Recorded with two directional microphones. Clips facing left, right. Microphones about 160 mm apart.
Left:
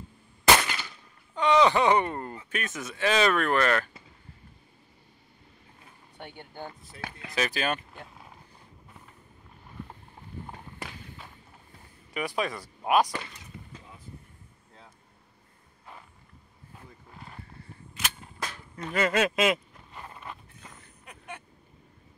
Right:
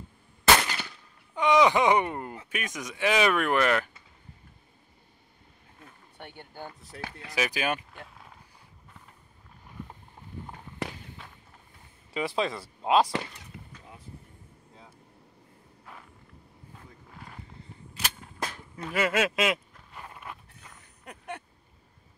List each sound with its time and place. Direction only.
1.3 s speech: 10° right (ahead or behind)
6.9 s speech: 55° right (ahead or behind)
7.2 s speech: 10° right (ahead or behind)
7.9 s a sound: 5° left (ahead or behind)
12.1 s speech: 25° right (ahead or behind)
17.1 s vehicle: centre (ahead or behind)
17.9 s cap gun: 35° right (ahead or behind)
18.8 s a sound: 10° right (ahead or behind)
21.0 s vehicle: 60° right (ahead or behind)